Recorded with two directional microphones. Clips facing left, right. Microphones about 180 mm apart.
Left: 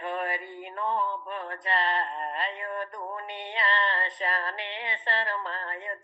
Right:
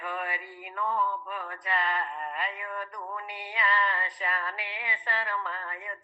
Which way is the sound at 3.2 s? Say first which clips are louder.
Left 1 dB; 25° left (ahead or behind).